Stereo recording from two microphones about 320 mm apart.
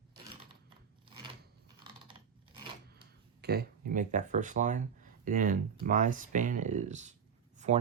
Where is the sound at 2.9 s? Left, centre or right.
Right.